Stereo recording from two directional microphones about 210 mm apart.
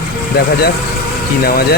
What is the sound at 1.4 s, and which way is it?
Speech, 45° left (ahead or behind).